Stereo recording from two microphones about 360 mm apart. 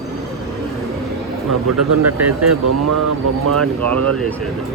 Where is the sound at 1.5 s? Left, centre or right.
Right.